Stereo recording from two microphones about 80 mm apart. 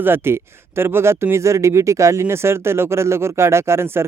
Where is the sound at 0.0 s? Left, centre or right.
Right.